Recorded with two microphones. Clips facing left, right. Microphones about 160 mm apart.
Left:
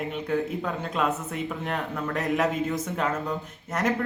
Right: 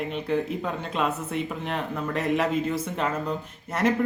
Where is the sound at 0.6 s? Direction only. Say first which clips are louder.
Even; centre (ahead or behind).